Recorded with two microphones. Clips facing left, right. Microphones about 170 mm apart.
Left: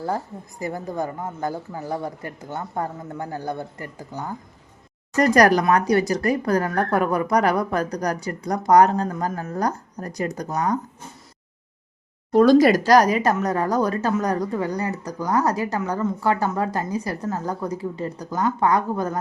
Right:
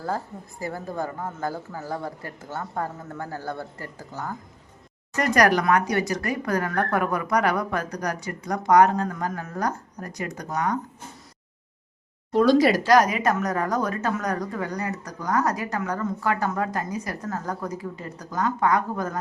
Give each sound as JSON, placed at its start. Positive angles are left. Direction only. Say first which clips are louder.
{"t": 0.6, "sound": "speech", "louder": "left 3 dB", "side_deg": 20}
{"t": 5.1, "sound": "a woman's voice", "louder": "left 4 dB", "side_deg": 35}
{"t": 12.3, "sound": "a woman's voice", "louder": "left 4 dB", "side_deg": 50}